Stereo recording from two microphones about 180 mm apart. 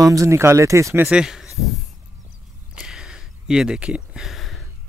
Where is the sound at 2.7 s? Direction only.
5° right (ahead or behind).